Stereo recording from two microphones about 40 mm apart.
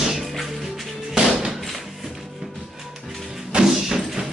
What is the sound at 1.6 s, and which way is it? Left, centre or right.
Music, centre.